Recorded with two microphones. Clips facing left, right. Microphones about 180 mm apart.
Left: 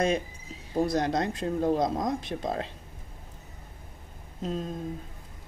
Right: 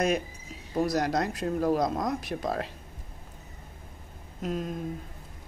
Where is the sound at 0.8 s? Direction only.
25° left (ahead or behind).